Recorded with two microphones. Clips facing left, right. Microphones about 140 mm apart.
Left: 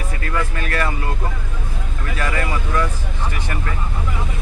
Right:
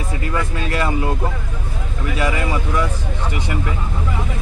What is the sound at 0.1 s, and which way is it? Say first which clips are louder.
Speech: right 1 dB; 20° right (ahead or behind).